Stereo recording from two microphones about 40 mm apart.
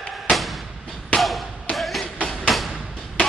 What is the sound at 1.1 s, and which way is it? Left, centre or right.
Basketball bounce, left.